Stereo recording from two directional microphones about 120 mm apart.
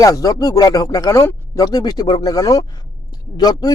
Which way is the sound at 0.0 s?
30° left (ahead or behind).